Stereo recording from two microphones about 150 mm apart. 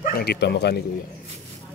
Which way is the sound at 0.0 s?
85° left.